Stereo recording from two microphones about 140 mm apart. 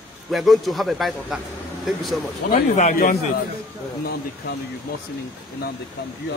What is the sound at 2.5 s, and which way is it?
Speech, 60° left (ahead or behind).